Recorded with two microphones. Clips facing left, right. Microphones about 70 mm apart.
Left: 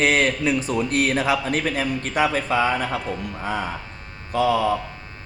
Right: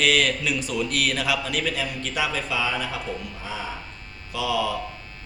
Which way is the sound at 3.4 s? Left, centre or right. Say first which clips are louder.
Left 9 dB; left.